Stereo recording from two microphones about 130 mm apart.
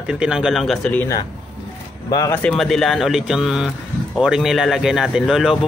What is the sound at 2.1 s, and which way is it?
Speech, 30° left (ahead or behind).